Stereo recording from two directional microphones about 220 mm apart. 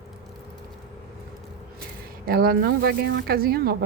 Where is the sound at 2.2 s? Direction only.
40° right (ahead or behind).